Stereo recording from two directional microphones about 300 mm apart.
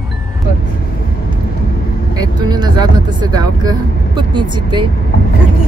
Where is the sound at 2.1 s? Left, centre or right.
Centre.